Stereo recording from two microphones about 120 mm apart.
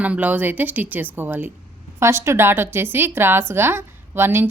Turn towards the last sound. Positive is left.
turn(degrees=-20)  # may be behind; listen again after turning